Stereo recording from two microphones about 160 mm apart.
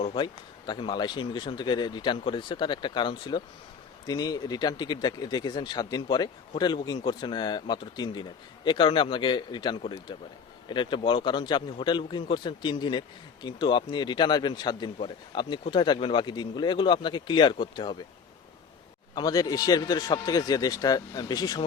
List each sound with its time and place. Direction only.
0.0 s a man's voice: 30° left (ahead or behind)
19.1 s a man's voice: 25° left (ahead or behind)